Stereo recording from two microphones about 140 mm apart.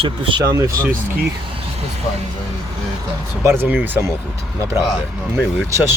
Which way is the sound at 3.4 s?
15° right (ahead or behind).